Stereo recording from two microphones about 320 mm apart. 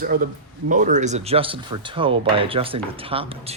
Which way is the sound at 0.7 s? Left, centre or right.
Right.